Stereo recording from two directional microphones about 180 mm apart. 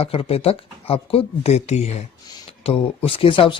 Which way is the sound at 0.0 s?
30° left (ahead or behind).